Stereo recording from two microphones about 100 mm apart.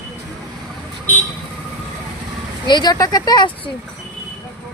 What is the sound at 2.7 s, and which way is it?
Speech, 50° left (ahead or behind).